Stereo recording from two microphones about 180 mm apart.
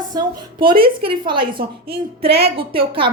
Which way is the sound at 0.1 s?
25° right (ahead or behind).